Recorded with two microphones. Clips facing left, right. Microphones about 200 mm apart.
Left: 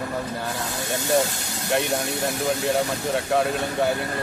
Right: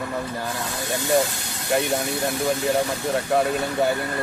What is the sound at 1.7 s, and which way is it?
Speech, centre (ahead or behind).